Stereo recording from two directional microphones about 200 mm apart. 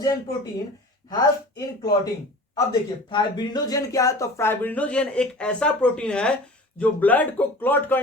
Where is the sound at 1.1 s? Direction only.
20° left (ahead or behind).